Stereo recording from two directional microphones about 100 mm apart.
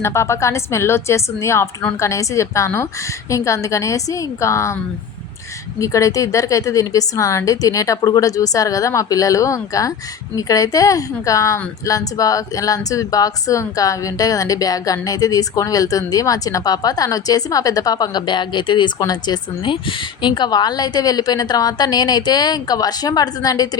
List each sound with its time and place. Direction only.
0.0 s a woman's voice: 25° left (ahead or behind)
5.8 s a woman's voice: 35° left (ahead or behind)